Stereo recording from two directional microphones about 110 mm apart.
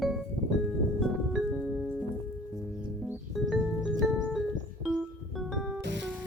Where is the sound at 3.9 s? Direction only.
Centre (ahead or behind).